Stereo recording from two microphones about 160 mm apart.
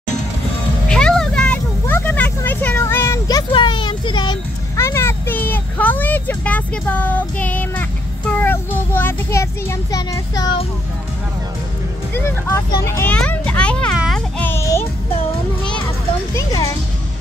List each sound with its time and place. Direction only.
0.8 s vehicle: 5° left (ahead or behind); by 4.4 s 30° left (ahead or behind)
4.7 s vehicle: 15° left (ahead or behind)
8.3 s child singing: 10° left (ahead or behind)
12.1 s vehicle: 15° left (ahead or behind)
12.7 s children playing: 20° left (ahead or behind)
13.9 s a sound: centre (ahead or behind)
14.4 s music: 15° left (ahead or behind)
16.3 s music: 20° left (ahead or behind)